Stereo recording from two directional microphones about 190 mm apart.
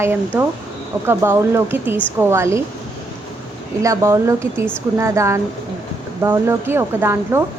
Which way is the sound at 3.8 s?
15° right (ahead or behind).